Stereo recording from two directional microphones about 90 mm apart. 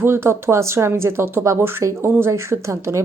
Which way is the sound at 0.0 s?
25° right (ahead or behind).